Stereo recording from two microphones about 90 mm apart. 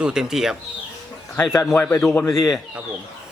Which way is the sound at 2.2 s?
40° left (ahead or behind).